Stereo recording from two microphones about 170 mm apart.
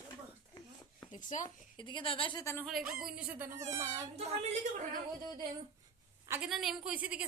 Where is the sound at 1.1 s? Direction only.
50° left (ahead or behind).